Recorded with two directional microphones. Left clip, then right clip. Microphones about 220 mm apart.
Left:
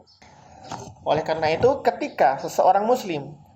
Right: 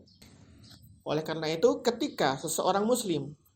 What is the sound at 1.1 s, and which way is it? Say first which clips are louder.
Speech: left 10 dB; 45° right (ahead or behind).